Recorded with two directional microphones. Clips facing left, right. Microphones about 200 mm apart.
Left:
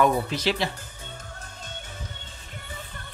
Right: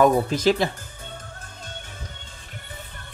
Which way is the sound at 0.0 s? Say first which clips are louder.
Right 5 dB; 45° right (ahead or behind).